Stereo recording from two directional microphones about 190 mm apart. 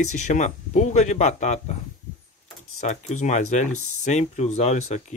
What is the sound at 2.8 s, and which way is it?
Speech, 40° left (ahead or behind).